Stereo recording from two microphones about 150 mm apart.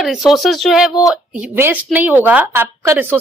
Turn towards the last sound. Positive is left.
turn(degrees=-15)  # may be behind; listen again after turning